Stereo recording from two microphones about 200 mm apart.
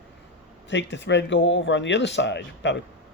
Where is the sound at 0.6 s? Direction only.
65° left (ahead or behind).